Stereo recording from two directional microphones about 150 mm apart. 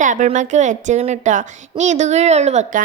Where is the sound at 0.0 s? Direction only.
55° right (ahead or behind).